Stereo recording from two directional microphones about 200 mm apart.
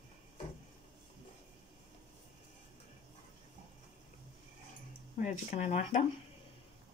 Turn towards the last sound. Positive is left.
turn(degrees=35)  # may be behind; listen again after turning